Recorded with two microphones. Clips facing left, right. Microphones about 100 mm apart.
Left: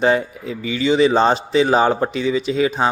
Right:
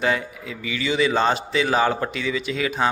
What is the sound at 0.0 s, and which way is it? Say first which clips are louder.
Speech: left 6 dB; 30° left (ahead or behind).